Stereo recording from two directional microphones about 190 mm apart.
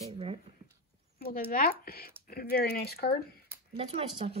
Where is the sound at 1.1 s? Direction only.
55° left (ahead or behind).